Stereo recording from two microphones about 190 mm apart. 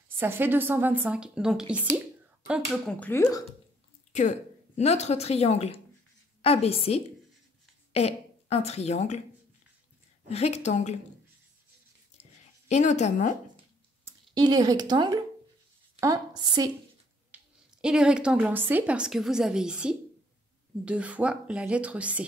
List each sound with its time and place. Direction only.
0.2 s a woman's voice: 10° right (ahead or behind)
2.9 s speech: 10° left (ahead or behind)
4.1 s a woman's voice: 40° left (ahead or behind)
10.2 s a woman's voice: 35° left (ahead or behind)
12.6 s a woman's voice: 35° left (ahead or behind)
14.0 s a woman's voice: 20° right (ahead or behind)
17.3 s a sound: 10° right (ahead or behind)
17.8 s a woman's voice: 5° right (ahead or behind)